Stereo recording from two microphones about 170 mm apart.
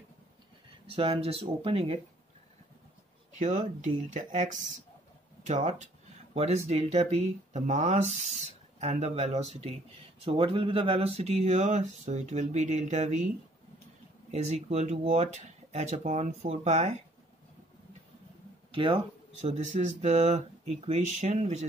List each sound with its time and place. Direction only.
0.8 s speech: 30° right (ahead or behind)
3.3 s speech: 45° right (ahead or behind)
14.3 s speech: 40° right (ahead or behind)
18.7 s speech: 30° right (ahead or behind)
19.4 s speech: 40° right (ahead or behind)